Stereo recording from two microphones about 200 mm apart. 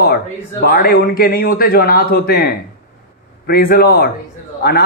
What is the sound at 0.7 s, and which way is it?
A man's voice, 50° left (ahead or behind).